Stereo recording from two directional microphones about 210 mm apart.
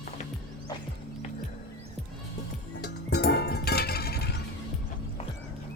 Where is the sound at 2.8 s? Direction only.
50° left (ahead or behind).